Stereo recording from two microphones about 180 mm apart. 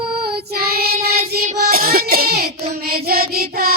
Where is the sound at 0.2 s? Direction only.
60° right (ahead or behind).